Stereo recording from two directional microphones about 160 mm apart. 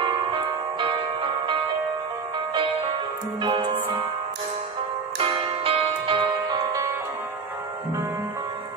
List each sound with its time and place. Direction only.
0.0 s music: 30° right (ahead or behind)
3.4 s music: 30° right (ahead or behind)
5.2 s music: 35° right (ahead or behind)